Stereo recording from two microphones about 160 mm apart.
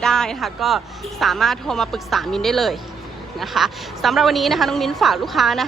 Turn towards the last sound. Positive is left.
turn(degrees=0)  # may be behind; listen again after turning